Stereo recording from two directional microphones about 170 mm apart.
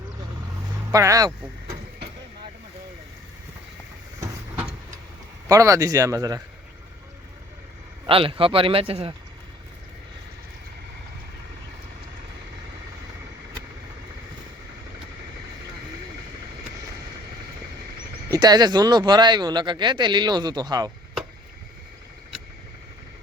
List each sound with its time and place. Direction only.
0.9 s speech: 20° right (ahead or behind)
5.5 s speech: 20° right (ahead or behind)
8.0 s speech: 30° right (ahead or behind)
18.3 s speech: 25° right (ahead or behind)